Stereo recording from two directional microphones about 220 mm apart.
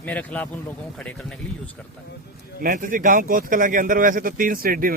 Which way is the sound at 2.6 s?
40° right (ahead or behind).